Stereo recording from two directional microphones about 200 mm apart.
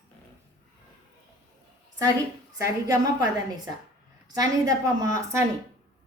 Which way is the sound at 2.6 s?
15° right (ahead or behind).